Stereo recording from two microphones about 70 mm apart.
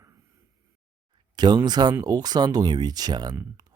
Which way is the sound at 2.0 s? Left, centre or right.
Right.